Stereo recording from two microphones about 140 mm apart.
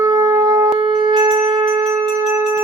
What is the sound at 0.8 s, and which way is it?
Wind instrument, 35° right (ahead or behind).